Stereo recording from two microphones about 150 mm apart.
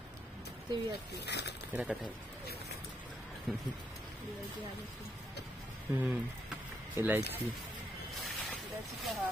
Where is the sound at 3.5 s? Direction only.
Centre (ahead or behind).